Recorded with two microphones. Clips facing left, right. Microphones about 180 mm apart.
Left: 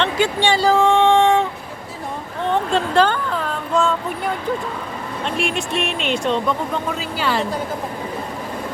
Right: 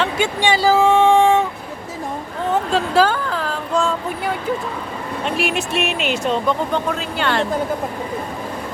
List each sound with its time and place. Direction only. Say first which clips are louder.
0.2 s speech: left 1 dB; 15° right (ahead or behind)
0.5 s a sound: right 2 dB; 5° right (ahead or behind)
2.5 s speech: even; 5° right (ahead or behind)
5.2 s speech: right 1 dB; 5° right (ahead or behind)